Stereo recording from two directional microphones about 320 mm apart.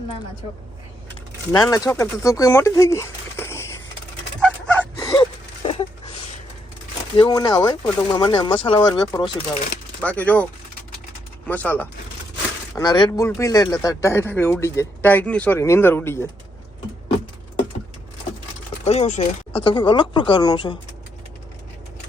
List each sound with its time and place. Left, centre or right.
1.5 s speech: centre
4.4 s chicken: centre
5.6 s a sound: centre
7.2 s speech: centre
11.4 s speech: centre
18.9 s speech: left